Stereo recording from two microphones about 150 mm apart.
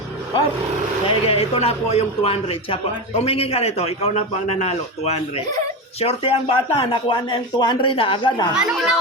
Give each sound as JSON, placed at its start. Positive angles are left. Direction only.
{"t": 1.0, "sound": "a man's voice", "side_deg": 40}
{"t": 8.5, "sound": "a child's voice", "side_deg": 0}